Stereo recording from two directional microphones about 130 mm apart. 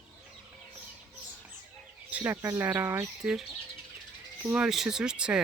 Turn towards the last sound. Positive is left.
turn(degrees=-5)  # may be behind; listen again after turning